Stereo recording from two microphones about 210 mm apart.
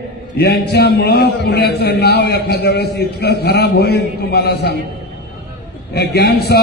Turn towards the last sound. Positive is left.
turn(degrees=50)  # may be behind; listen again after turning